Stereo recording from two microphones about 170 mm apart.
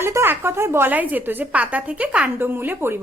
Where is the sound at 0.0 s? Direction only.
15° right (ahead or behind).